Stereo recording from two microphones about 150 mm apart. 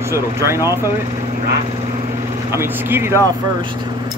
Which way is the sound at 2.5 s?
15° right (ahead or behind).